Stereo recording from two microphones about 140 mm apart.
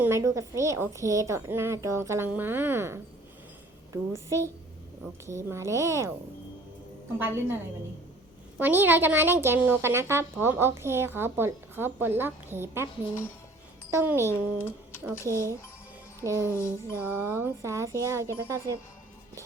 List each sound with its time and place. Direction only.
0.0 s a woman's voice: 20° right (ahead or behind)
7.2 s speech: 15° right (ahead or behind)
8.5 s speech: 15° right (ahead or behind)
13.9 s speech: 15° right (ahead or behind)
14.3 s speech: 15° left (ahead or behind)
16.2 s a woman's voice: 20° right (ahead or behind)
16.6 s music: 20° left (ahead or behind)
17.0 s a woman's voice: 15° right (ahead or behind)